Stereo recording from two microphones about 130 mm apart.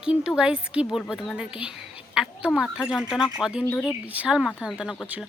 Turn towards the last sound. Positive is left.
turn(degrees=0)  # may be behind; listen again after turning